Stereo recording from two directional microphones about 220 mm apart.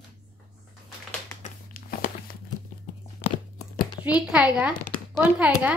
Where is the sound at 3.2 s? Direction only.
20° left (ahead or behind).